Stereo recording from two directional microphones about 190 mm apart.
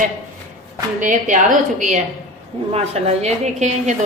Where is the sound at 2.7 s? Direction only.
35° right (ahead or behind).